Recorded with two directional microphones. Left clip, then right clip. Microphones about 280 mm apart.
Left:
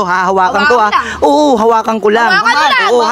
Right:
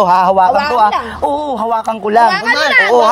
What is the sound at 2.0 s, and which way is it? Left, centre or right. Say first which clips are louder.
Speech: even; left.